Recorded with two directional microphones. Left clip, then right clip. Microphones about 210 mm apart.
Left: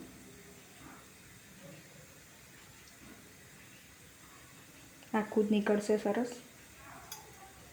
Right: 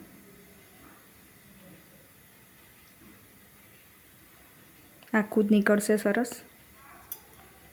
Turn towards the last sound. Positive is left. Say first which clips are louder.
# right 6 dB
turn(degrees=-35)  # may be behind; listen again after turning